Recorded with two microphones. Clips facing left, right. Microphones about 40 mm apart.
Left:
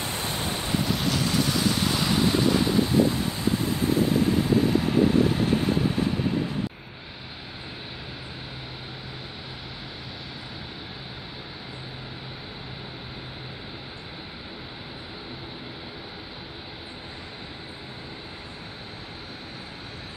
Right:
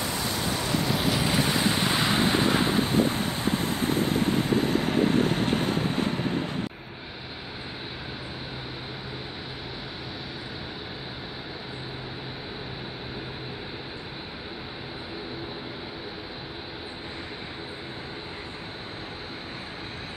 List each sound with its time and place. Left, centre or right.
0.0 s waves: left
0.8 s vehicle: centre; by 6.5 s right